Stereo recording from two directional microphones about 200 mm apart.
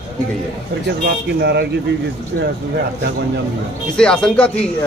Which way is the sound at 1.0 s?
55° right (ahead or behind).